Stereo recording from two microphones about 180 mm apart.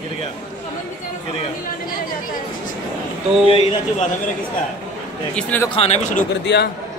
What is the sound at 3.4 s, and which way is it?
Speech, 30° left (ahead or behind).